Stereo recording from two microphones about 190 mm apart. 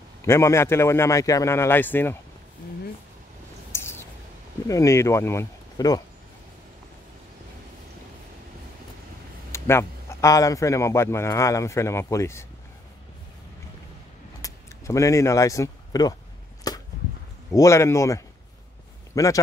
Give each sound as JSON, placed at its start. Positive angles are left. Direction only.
{"t": 0.2, "sound": "a man's voice", "side_deg": 15}
{"t": 3.7, "sound": "a sound", "side_deg": 15}
{"t": 4.6, "sound": "a man's voice", "side_deg": 15}
{"t": 9.5, "sound": "a man's voice", "side_deg": 15}
{"t": 14.4, "sound": "speech", "side_deg": 15}
{"t": 16.6, "sound": "chop", "side_deg": 20}
{"t": 17.5, "sound": "a man's voice", "side_deg": 15}